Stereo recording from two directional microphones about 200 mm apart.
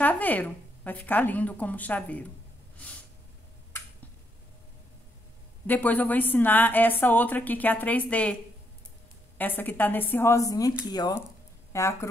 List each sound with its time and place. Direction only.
0.0 s a woman's voice: 10° left (ahead or behind)
5.7 s a woman's voice: 10° left (ahead or behind)
9.4 s a woman's voice: 10° left (ahead or behind)